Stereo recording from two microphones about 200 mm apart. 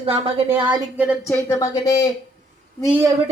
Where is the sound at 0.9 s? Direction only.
5° right (ahead or behind).